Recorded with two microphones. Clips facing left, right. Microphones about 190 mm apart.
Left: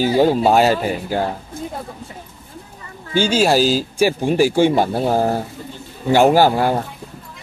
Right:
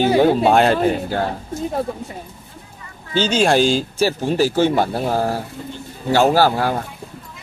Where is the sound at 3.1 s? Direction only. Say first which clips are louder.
Left 1 dB; 10° left (ahead or behind).